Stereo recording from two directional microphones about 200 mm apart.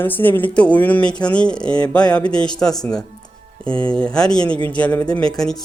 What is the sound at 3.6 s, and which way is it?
Speech, 25° right (ahead or behind).